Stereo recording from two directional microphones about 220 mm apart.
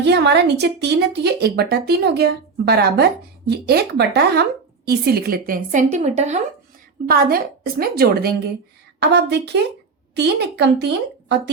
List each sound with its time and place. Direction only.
0.0 s a woman's voice: 50° right (ahead or behind); by 6.4 s 30° right (ahead or behind)
7.1 s speech: 45° right (ahead or behind)